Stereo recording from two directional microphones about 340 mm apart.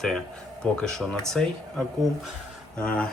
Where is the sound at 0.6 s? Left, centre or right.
Centre.